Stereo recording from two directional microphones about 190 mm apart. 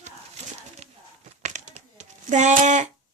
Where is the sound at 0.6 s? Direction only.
35° right (ahead or behind).